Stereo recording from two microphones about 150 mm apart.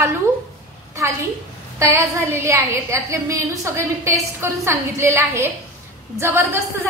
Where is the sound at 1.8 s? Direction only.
20° right (ahead or behind).